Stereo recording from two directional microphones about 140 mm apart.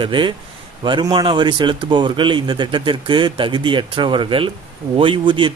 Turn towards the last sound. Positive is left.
turn(degrees=-35)  # may be behind; listen again after turning